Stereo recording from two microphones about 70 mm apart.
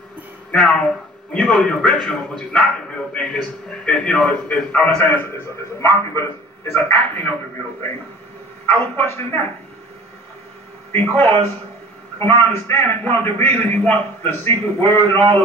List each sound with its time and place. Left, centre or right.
0.5 s a man's voice: centre; by 9.4 s left
10.9 s a man's voice: left